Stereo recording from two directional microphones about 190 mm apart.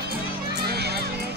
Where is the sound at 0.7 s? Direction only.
60° right (ahead or behind).